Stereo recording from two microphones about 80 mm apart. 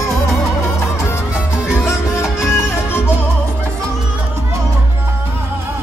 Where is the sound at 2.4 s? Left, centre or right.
Left.